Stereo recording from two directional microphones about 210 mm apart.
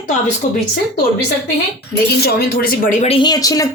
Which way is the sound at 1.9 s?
45° left (ahead or behind).